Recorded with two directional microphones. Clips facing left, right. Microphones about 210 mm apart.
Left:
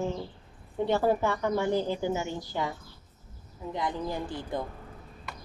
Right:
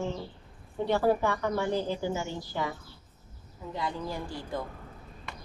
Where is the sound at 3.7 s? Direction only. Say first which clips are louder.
Left 2 dB; 20° left (ahead or behind).